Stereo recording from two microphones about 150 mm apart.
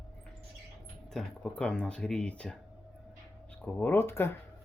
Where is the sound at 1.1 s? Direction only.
5° left (ahead or behind).